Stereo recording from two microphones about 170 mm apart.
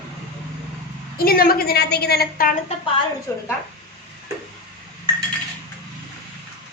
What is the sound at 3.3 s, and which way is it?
Speech, 15° left (ahead or behind).